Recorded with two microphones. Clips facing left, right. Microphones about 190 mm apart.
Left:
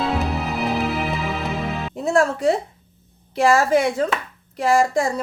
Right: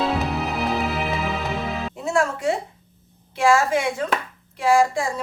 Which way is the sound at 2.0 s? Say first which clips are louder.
Left 5 dB; 35° left (ahead or behind).